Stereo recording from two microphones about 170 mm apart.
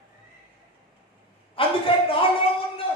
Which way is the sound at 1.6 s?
30° left (ahead or behind).